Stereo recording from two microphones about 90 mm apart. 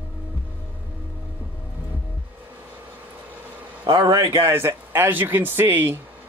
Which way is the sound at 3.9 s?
60° right (ahead or behind).